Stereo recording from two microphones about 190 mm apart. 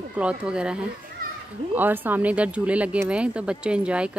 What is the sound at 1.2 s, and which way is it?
Children playing, 50° right (ahead or behind).